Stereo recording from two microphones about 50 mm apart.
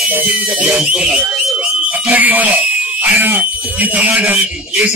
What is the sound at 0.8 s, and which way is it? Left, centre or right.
Speech, centre.